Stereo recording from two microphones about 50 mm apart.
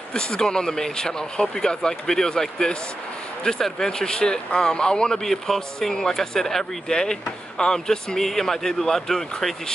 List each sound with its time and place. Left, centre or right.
0.1 s speech: centre